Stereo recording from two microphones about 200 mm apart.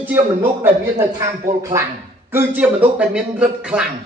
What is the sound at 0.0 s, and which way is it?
A man's voice, 10° right (ahead or behind).